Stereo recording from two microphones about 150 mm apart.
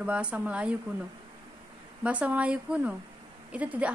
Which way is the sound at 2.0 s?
10° right (ahead or behind).